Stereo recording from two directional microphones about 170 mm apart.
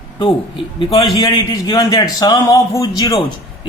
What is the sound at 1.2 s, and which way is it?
A man's voice, 20° left (ahead or behind).